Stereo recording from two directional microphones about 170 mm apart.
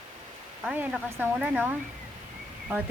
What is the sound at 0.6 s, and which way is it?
Speech, 5° right (ahead or behind).